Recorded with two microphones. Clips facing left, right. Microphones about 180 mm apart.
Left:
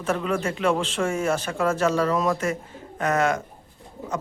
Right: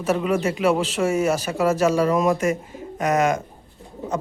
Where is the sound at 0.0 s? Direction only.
10° right (ahead or behind).